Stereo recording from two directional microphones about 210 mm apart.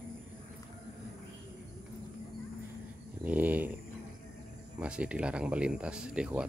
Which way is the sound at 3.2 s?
10° right (ahead or behind).